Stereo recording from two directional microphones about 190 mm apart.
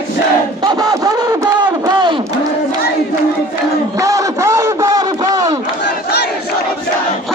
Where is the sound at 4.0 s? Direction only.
15° right (ahead or behind).